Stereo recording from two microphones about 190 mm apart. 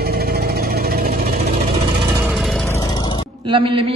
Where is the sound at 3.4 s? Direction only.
25° right (ahead or behind).